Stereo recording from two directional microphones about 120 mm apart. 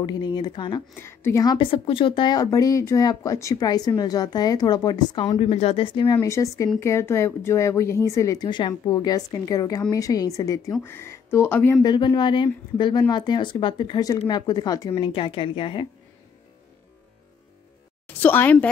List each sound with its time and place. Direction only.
0.0 s speech: 35° left (ahead or behind)
1.0 s speech: 20° left (ahead or behind)
1.4 s speech: 40° left (ahead or behind)
5.4 s speech: 60° left (ahead or behind)
5.9 s speech: 40° left (ahead or behind)
6.1 s speech: 25° left (ahead or behind)
11.8 s speech: 35° left (ahead or behind)
15.0 s a woman's voice: 45° left (ahead or behind)
18.0 s a woman's voice: 15° left (ahead or behind)